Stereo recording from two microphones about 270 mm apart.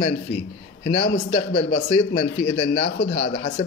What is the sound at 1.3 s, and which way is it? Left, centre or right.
Speech, left.